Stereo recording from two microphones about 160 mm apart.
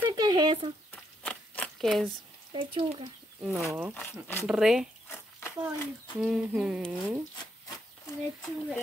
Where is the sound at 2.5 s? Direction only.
30° right (ahead or behind).